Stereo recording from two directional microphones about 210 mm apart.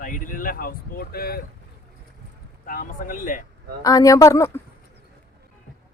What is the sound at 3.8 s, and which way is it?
Speech, 15° left (ahead or behind).